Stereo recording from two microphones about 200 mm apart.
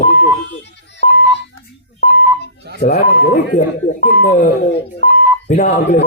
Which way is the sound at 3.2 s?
40° left (ahead or behind).